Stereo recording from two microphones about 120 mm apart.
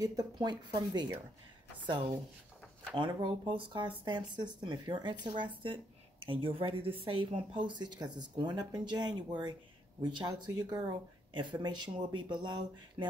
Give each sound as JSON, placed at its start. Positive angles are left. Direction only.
{"t": 0.0, "sound": "speech", "side_deg": -30}